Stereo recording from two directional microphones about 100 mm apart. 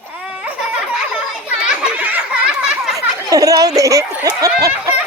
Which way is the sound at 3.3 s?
35° right (ahead or behind).